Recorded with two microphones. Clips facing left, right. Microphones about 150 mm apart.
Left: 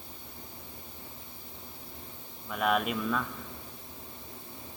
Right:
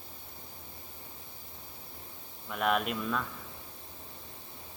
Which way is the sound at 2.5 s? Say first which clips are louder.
Left 1 dB; centre (ahead or behind).